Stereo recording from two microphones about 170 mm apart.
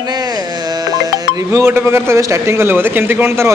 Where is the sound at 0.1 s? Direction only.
25° right (ahead or behind).